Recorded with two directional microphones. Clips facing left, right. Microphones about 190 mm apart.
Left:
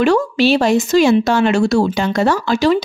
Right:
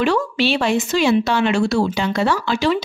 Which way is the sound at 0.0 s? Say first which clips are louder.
Left 5 dB; 45° left (ahead or behind).